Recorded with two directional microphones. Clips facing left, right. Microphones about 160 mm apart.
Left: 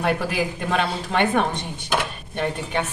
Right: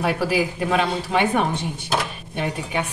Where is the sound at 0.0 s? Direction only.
5° right (ahead or behind).